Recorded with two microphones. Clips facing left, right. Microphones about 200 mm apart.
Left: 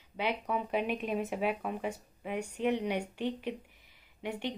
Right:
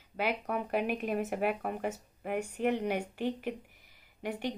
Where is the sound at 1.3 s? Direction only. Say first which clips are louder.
Right 1 dB; 55° right (ahead or behind).